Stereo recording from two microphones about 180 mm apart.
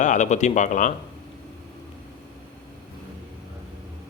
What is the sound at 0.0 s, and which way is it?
Speech, 45° left (ahead or behind).